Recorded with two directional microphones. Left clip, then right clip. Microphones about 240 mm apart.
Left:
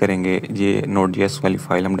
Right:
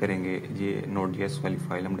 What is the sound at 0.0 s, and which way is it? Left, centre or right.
Speech, left.